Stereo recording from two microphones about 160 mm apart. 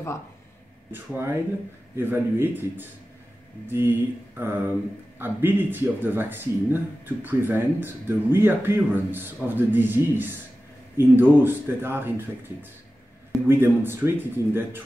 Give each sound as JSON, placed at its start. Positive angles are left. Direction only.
{"t": 0.9, "sound": "speech", "side_deg": -15}